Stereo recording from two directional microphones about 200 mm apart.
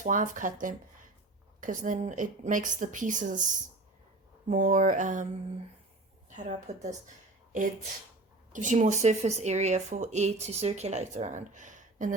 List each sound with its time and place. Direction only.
0.0 s a woman's voice: 40° right (ahead or behind)
6.3 s a woman's voice: 35° right (ahead or behind)
8.5 s a woman's voice: 40° right (ahead or behind)